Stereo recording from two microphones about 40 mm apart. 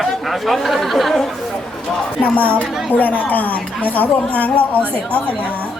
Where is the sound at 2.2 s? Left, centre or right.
Left.